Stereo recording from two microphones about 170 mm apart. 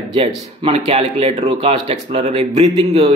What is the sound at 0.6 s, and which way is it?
Speech, 35° right (ahead or behind).